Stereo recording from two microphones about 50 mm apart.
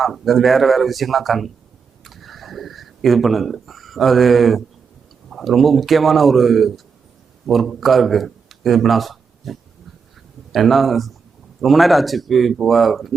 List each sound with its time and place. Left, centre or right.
0.0 s a man's voice: centre